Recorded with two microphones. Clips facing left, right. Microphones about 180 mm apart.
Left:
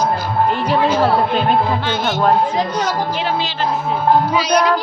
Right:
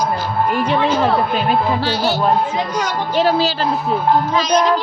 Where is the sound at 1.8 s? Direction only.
35° right (ahead or behind).